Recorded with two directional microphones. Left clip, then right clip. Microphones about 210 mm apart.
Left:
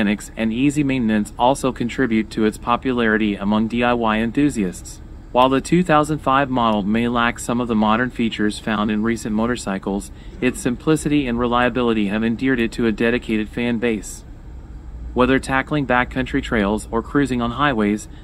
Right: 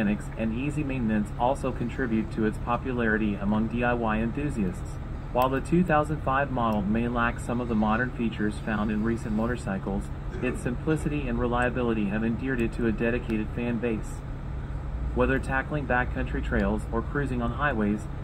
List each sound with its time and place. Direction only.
0.0 s speech: 70° left (ahead or behind)
15.1 s speech: 70° left (ahead or behind)